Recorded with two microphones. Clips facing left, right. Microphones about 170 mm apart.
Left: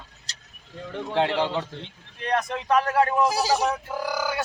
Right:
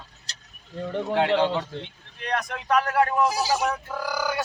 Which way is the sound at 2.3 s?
25° left (ahead or behind).